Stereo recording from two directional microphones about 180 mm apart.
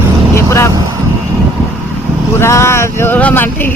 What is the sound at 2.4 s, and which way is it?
Speech, 15° left (ahead or behind).